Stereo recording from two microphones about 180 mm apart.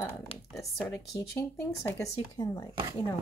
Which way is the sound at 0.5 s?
Centre (ahead or behind).